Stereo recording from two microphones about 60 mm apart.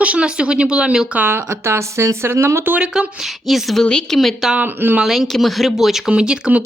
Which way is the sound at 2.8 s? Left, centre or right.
Centre.